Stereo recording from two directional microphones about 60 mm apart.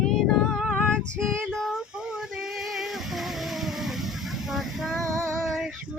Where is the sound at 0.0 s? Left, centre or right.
Centre.